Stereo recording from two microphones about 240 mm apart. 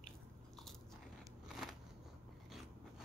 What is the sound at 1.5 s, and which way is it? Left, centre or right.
Scissors, centre.